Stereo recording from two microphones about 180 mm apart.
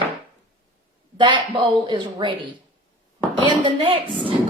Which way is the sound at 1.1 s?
25° right (ahead or behind).